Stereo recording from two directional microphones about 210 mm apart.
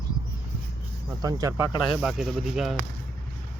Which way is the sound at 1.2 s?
15° right (ahead or behind).